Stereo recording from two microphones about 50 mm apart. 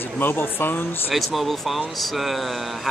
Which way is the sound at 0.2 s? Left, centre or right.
Left.